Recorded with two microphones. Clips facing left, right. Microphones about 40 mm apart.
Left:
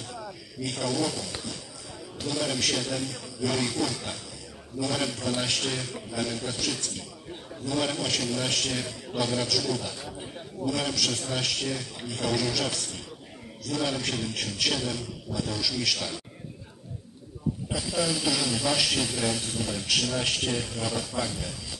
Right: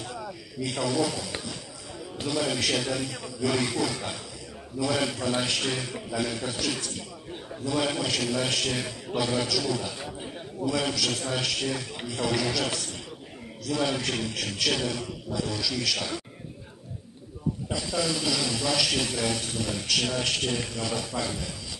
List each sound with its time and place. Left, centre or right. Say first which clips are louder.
0.0 s a man's voice: right 2 dB; centre
10.1 s a sound: right 2 dB; centre
11.1 s a man's voice: right 1 dB; centre
17.6 s a man's voice: even; centre